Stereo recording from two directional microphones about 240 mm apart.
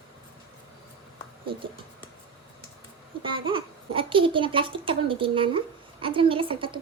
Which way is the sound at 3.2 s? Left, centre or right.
Right.